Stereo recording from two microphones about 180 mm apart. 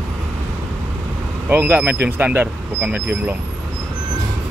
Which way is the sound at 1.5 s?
10° right (ahead or behind).